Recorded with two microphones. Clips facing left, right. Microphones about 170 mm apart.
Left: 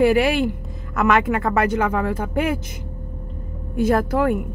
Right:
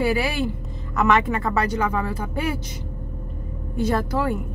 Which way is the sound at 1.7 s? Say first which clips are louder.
Left 3 dB; 50° left (ahead or behind).